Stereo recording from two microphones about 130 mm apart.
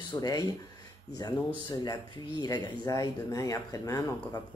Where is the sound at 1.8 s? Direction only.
30° left (ahead or behind).